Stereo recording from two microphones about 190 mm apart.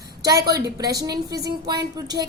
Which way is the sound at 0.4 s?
20° right (ahead or behind).